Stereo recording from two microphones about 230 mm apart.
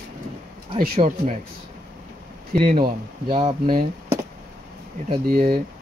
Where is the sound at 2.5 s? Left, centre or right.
Right.